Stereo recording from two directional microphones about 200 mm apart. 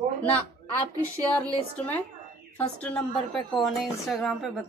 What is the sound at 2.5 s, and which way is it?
Speech, 10° left (ahead or behind).